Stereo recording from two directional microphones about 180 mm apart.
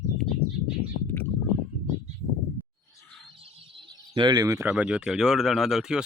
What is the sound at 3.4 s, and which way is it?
Bird, 30° right (ahead or behind).